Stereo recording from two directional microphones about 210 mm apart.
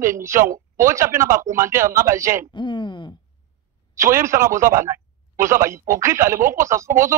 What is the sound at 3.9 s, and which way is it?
Speech, 15° right (ahead or behind).